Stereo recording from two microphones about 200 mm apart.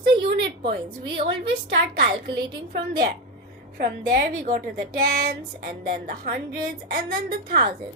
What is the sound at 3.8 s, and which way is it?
Speech, 45° right (ahead or behind).